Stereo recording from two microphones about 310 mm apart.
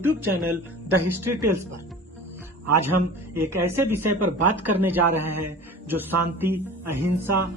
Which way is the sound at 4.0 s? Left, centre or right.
Right.